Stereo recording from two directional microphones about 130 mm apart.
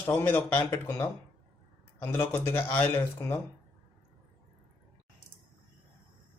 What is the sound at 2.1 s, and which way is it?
Speech, 15° left (ahead or behind).